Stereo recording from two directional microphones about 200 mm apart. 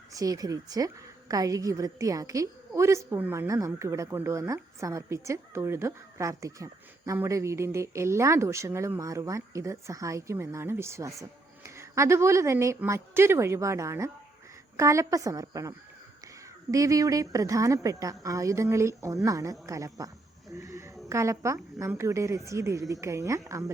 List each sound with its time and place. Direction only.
0.1 s a woman's voice: 15° right (ahead or behind)
16.7 s a woman's voice: 15° right (ahead or behind)
20.5 s a sound: 15° right (ahead or behind)
21.1 s a woman's voice: 15° right (ahead or behind)